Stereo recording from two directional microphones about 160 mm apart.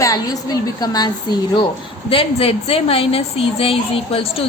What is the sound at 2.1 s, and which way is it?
A woman's voice, 35° left (ahead or behind).